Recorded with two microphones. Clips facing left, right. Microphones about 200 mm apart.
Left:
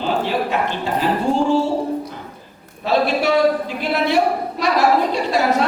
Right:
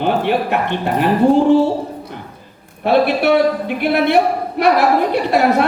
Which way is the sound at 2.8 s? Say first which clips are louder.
Right 4 dB; 60° right (ahead or behind).